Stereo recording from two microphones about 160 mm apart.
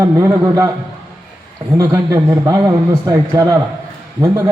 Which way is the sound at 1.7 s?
20° right (ahead or behind).